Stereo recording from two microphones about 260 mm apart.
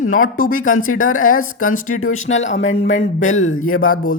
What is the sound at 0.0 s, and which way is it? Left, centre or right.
Speech, left.